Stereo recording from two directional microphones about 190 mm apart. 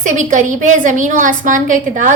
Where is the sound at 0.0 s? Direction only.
40° right (ahead or behind).